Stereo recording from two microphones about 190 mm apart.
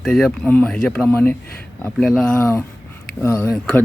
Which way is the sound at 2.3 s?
15° left (ahead or behind).